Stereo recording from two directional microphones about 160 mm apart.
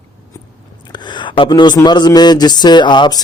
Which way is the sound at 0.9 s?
30° left (ahead or behind).